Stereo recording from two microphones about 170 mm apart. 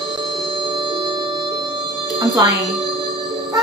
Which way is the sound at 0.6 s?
30° right (ahead or behind).